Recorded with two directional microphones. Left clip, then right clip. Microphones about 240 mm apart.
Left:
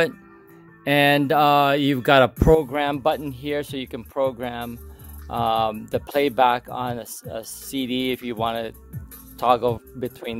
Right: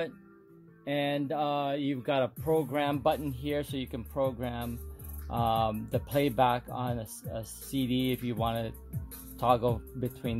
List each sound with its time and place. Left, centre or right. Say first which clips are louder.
0.8 s speech: left 13 dB; left